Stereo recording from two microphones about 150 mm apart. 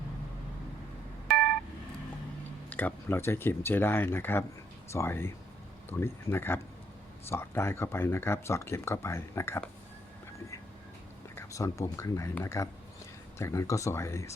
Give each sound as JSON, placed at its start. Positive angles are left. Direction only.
{"t": 2.6, "sound": "speech", "side_deg": 10}
{"t": 11.3, "sound": "speech", "side_deg": 20}